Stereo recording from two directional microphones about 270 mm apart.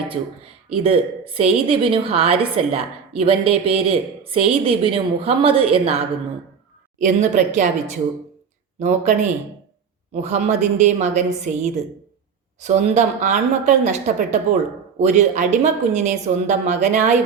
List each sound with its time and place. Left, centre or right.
0.1 s a woman's voice: right